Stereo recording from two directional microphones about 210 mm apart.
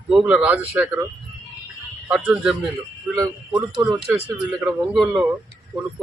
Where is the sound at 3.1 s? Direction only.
15° right (ahead or behind).